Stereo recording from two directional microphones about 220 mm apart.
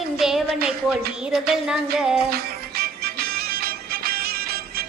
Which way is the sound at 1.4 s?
Centre (ahead or behind).